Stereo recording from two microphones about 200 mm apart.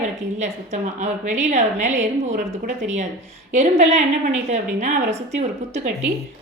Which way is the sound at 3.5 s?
35° right (ahead or behind).